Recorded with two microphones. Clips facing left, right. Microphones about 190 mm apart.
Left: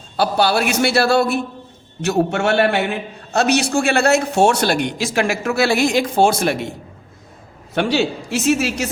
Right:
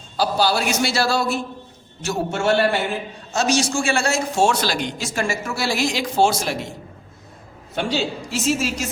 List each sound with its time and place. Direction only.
0.2 s a man's voice: 60° left (ahead or behind)
7.8 s a man's voice: 65° left (ahead or behind)